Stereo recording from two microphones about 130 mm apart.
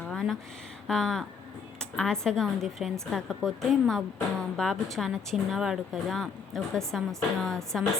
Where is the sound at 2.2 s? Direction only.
5° left (ahead or behind).